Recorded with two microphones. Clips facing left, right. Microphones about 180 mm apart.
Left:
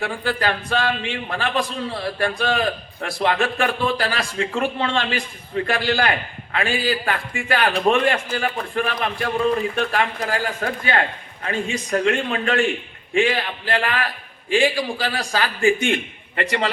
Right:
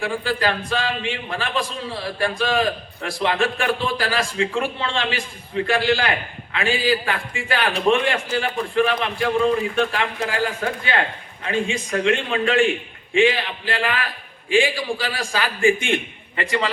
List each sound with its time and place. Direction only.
0.0 s a man's voice: 45° left (ahead or behind)